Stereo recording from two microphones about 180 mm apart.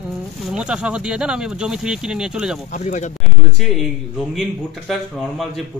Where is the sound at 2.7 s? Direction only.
40° left (ahead or behind).